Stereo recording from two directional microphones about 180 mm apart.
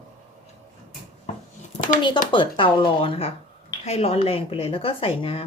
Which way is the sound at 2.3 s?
25° left (ahead or behind).